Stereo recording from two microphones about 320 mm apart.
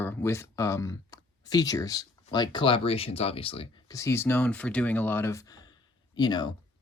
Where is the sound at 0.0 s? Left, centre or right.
Centre.